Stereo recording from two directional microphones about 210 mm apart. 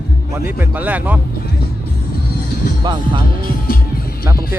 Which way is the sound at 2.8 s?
20° right (ahead or behind).